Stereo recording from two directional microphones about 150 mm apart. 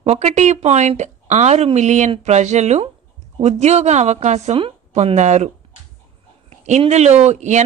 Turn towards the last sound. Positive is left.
turn(degrees=-50)  # may be behind; listen again after turning